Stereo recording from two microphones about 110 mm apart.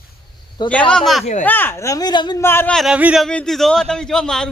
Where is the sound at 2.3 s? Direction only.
20° left (ahead or behind).